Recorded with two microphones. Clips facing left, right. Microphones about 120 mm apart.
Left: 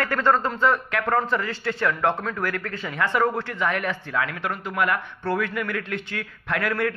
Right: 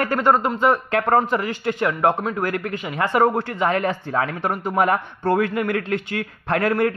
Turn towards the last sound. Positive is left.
turn(degrees=-30)  # may be behind; listen again after turning